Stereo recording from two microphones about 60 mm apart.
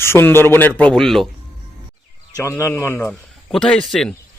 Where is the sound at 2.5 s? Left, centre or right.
Left.